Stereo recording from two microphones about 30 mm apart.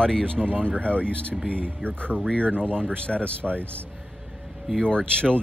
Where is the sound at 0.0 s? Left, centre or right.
Left.